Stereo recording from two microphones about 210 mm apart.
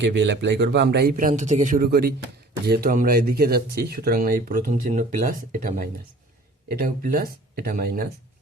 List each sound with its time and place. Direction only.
0.0 s speech: 55° right (ahead or behind)
1.3 s speech: 35° right (ahead or behind)